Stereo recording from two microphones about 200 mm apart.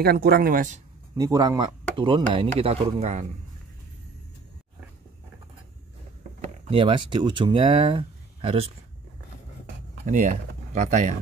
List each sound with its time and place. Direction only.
0.0 s speech: 50° right (ahead or behind)
1.1 s speech: 20° right (ahead or behind); by 3.3 s 35° right (ahead or behind)
6.7 s speech: 25° right (ahead or behind)
10.0 s speech: 40° right (ahead or behind)